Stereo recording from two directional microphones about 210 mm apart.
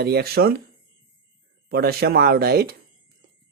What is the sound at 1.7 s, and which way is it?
Speech, 50° right (ahead or behind).